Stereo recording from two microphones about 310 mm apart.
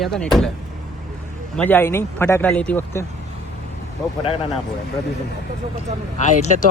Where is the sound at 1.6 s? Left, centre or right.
Centre.